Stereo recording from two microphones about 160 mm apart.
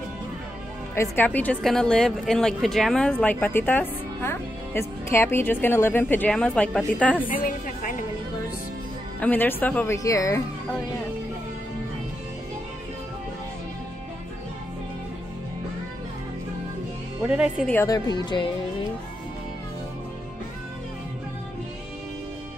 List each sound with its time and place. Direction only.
0.9 s a woman's voice: 10° left (ahead or behind)
7.4 s a woman's voice: 60° left (ahead or behind)
9.2 s a woman's voice: 10° left (ahead or behind)
9.9 s speech: 20° left (ahead or behind)
17.2 s speech: 10° right (ahead or behind)
17.8 s speech: 25° left (ahead or behind)